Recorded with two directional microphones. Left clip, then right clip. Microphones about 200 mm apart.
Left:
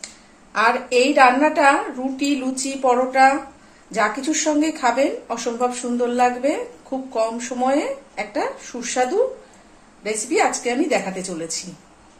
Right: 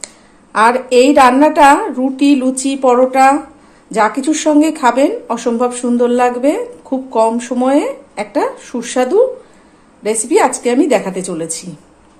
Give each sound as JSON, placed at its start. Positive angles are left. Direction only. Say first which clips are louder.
{"t": 0.0, "sound": "a woman's voice", "louder": "right 5 dB", "side_deg": -50}
{"t": 10.2, "sound": "a woman's voice", "louder": "right 7 dB", "side_deg": -50}